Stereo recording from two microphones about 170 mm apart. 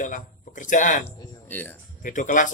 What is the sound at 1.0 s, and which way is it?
Speech, 10° left (ahead or behind).